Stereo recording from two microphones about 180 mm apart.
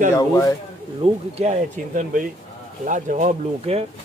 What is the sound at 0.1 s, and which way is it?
Speech, 20° left (ahead or behind).